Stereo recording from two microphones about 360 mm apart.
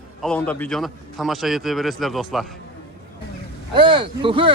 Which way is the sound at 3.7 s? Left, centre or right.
Centre.